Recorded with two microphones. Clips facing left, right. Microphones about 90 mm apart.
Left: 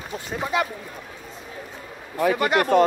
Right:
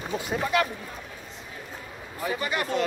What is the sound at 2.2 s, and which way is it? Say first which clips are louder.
Speech: left 9 dB; 65° left (ahead or behind).